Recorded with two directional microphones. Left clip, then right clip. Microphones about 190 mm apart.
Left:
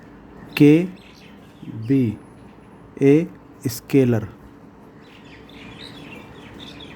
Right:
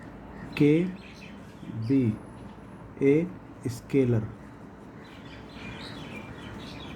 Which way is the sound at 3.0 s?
55° left (ahead or behind).